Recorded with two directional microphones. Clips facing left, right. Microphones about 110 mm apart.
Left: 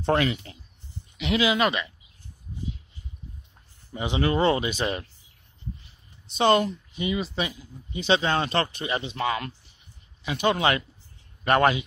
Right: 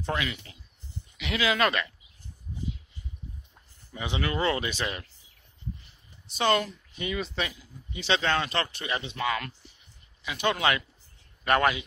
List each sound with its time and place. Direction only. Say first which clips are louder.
0.0 s speech: left 8 dB; 35° left (ahead or behind)
1.1 s speech: left 5 dB; 25° left (ahead or behind)
1.5 s speech: left 2 dB; 10° left (ahead or behind)
3.9 s speech: left 6 dB; 25° left (ahead or behind)
4.8 s speech: left 6 dB; 30° left (ahead or behind)
6.3 s speech: left 5 dB; 25° left (ahead or behind)
7.2 s speech: left 3 dB; 5° left (ahead or behind)
8.4 s speech: left 4 dB; 30° left (ahead or behind)